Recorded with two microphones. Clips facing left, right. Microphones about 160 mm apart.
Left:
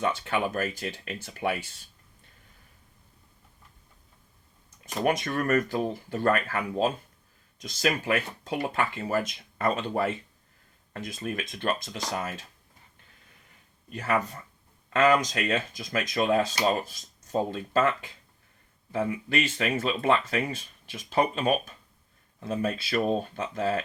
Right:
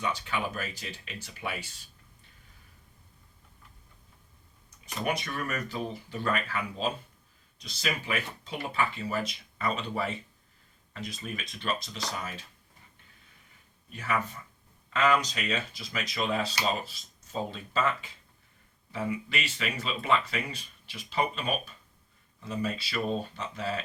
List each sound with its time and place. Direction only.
0.0 s speech: 50° left (ahead or behind)
5.0 s speech: 50° left (ahead or behind)
13.9 s speech: 45° left (ahead or behind)